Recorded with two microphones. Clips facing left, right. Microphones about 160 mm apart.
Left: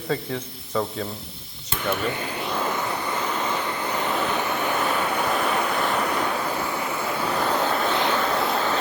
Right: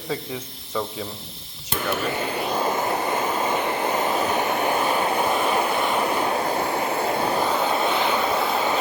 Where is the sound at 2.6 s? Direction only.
40° right (ahead or behind).